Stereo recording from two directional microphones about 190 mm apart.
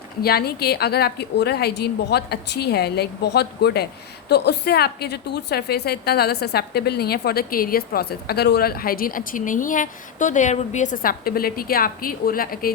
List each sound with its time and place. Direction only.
0.2 s a woman's voice: 55° left (ahead or behind)